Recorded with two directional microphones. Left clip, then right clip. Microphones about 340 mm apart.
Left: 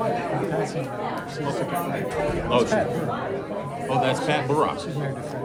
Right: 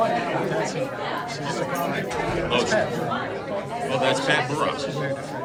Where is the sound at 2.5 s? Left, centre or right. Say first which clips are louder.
Left 2 dB; centre.